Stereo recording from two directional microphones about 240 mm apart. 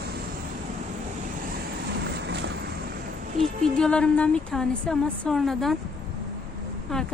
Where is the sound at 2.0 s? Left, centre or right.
Right.